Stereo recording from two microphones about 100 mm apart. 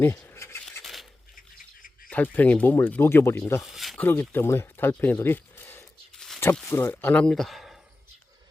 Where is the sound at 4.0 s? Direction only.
20° left (ahead or behind).